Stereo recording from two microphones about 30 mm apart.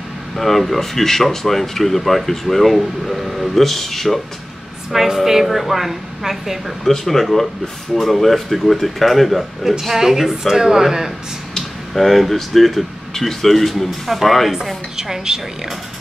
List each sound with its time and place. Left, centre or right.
0.4 s speech: centre
4.9 s speech: centre
7.1 s speech: centre
11.9 s speech: centre
15.0 s a woman's voice: centre